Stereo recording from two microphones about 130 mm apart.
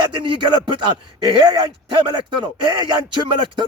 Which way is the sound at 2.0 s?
35° right (ahead or behind).